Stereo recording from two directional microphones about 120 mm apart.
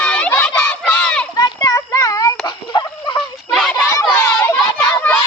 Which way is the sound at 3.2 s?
Centre (ahead or behind).